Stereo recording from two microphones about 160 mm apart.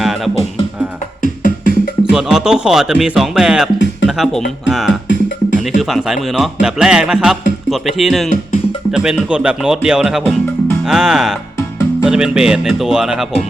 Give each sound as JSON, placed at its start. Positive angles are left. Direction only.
{"t": 1.2, "sound": "music", "side_deg": 55}
{"t": 2.1, "sound": "speech", "side_deg": -5}